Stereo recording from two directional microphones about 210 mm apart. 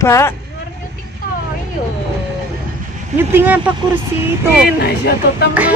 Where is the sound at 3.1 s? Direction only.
10° right (ahead or behind).